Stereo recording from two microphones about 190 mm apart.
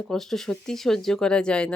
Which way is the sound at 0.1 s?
Centre (ahead or behind).